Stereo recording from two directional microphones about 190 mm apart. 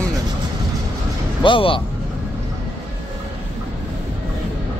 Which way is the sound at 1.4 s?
25° left (ahead or behind).